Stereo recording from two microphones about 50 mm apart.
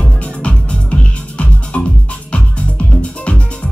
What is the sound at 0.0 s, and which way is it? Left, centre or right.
Music, left.